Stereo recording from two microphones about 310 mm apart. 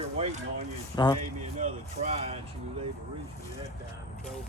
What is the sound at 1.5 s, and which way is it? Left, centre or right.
Speech, right.